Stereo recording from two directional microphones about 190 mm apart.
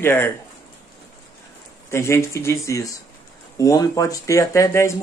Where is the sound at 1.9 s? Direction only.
15° left (ahead or behind).